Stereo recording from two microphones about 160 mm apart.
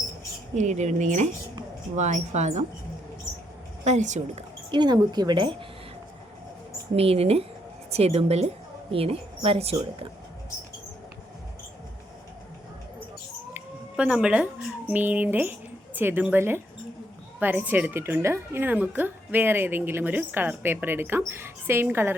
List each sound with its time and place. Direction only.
0.5 s speech: 45° right (ahead or behind)
3.8 s speech: 50° right (ahead or behind)
4.7 s speech: 25° right (ahead or behind)
6.9 s a woman's voice: 40° right (ahead or behind)
13.5 s a woman's voice: 10° right (ahead or behind)